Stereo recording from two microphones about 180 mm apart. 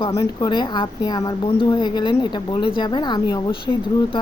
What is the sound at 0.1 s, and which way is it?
A woman's voice, 20° left (ahead or behind).